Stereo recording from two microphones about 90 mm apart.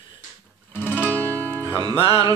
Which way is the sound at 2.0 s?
85° left.